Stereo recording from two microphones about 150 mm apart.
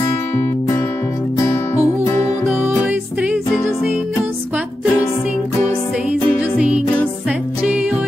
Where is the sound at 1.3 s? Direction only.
20° left (ahead or behind).